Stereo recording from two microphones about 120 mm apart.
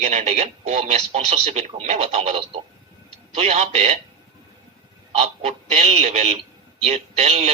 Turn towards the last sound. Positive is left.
turn(degrees=-60)  # may be behind; listen again after turning